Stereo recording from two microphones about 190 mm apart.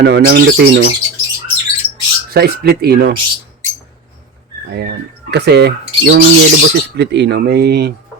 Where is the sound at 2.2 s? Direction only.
55° right (ahead or behind).